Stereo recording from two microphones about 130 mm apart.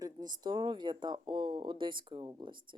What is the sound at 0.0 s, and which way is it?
Speech, 30° right (ahead or behind).